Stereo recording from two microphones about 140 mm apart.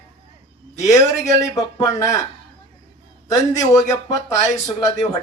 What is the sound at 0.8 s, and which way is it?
Speech, 25° left (ahead or behind).